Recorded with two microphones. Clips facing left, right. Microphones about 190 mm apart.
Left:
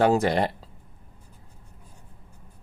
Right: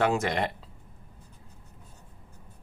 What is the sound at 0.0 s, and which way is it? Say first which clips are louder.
Speech: left 5 dB; 35° left (ahead or behind).